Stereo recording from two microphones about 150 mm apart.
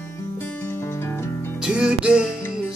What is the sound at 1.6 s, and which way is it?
Music, 5° right (ahead or behind).